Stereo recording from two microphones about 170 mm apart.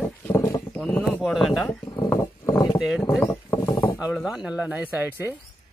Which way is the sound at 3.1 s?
15° left (ahead or behind).